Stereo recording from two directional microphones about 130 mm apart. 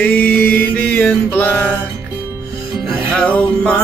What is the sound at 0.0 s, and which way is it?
Mantra, 10° left (ahead or behind).